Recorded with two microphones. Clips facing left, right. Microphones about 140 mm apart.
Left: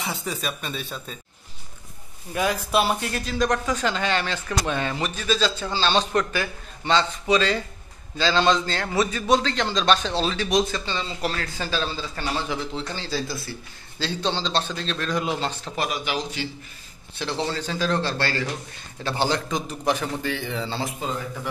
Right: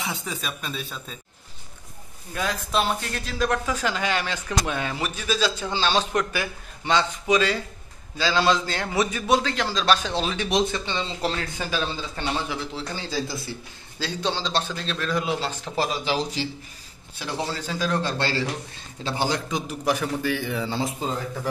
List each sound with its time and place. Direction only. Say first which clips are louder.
0.0 s speech: left 2 dB; centre (ahead or behind)
2.3 s speech: left 3 dB; 10° left (ahead or behind)
15.7 s speech: right 4 dB; 30° right (ahead or behind)
17.2 s speech: left 2 dB; 10° right (ahead or behind)
21.0 s a man's voice: right 1 dB; 30° right (ahead or behind)